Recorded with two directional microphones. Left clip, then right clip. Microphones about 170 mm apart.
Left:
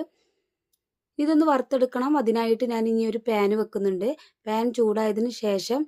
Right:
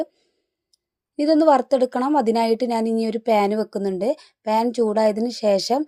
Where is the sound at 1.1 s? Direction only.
25° right (ahead or behind).